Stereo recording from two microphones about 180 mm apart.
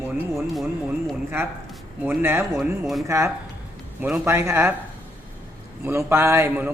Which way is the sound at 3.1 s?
15° right (ahead or behind).